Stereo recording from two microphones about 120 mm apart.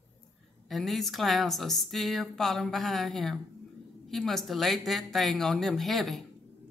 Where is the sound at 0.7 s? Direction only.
Centre (ahead or behind).